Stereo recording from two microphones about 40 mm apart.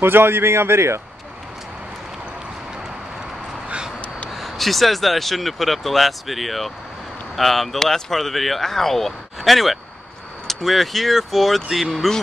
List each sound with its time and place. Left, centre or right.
0.0 s speech: right
4.3 s speech: centre